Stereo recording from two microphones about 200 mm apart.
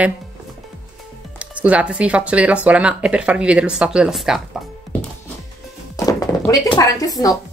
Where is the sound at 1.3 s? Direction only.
5° right (ahead or behind).